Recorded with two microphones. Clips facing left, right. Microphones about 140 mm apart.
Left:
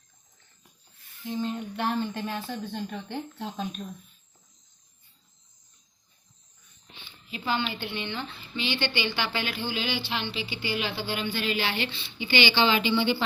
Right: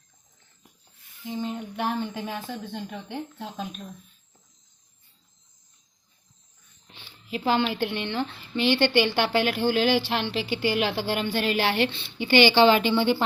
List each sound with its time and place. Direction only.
1.2 s speech: 15° right (ahead or behind)
7.3 s a woman's voice: 85° right; by 13.2 s 45° right (ahead or behind)